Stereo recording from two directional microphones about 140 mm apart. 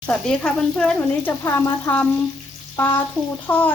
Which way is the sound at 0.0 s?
5° left (ahead or behind).